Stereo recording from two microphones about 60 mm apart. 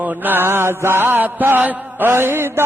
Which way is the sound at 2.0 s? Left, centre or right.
Right.